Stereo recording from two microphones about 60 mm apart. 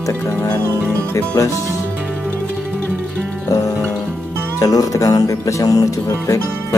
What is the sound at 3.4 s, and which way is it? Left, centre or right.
Music, left.